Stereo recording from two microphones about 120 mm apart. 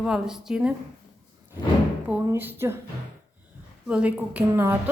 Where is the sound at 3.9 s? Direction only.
10° right (ahead or behind).